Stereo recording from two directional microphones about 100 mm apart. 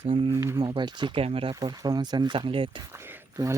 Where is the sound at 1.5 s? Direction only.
45° right (ahead or behind).